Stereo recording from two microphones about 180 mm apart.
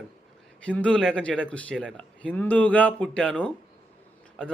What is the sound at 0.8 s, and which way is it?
A man's voice, 5° left (ahead or behind).